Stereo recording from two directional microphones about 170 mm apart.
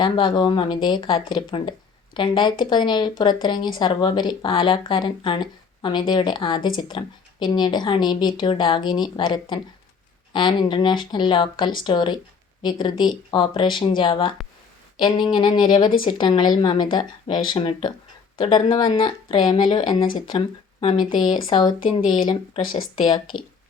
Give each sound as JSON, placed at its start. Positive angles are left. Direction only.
{"t": 0.0, "sound": "speech", "side_deg": 25}